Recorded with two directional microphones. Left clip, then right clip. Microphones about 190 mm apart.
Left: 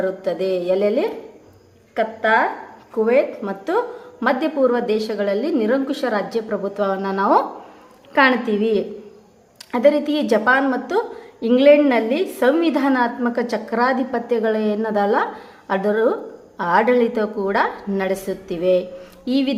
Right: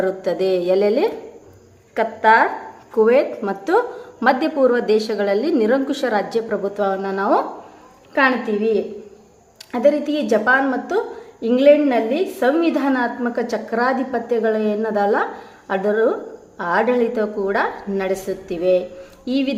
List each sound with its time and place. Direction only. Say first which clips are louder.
0.0 s a woman's voice: right 2 dB; 10° right (ahead or behind); by 19.5 s 10° left (ahead or behind)